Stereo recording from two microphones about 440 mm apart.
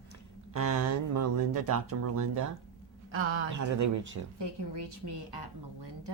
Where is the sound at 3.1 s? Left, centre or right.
Right.